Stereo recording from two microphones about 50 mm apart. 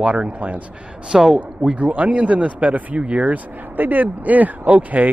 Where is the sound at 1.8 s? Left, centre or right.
Right.